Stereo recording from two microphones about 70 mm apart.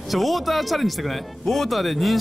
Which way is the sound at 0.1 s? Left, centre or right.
Centre.